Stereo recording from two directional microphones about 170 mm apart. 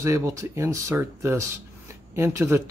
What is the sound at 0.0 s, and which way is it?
Speech, 20° right (ahead or behind).